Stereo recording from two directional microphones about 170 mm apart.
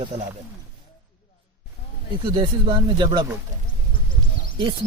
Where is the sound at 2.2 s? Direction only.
30° right (ahead or behind).